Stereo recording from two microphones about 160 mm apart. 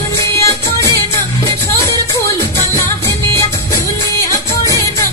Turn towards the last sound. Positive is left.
turn(degrees=20)  # may be behind; listen again after turning